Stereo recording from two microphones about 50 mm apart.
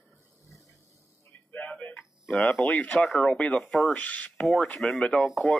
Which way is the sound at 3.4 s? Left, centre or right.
Left.